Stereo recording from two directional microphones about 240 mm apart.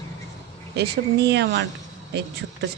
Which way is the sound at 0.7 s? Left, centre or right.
Right.